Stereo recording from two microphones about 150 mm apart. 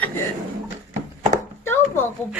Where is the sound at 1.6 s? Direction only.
15° left (ahead or behind).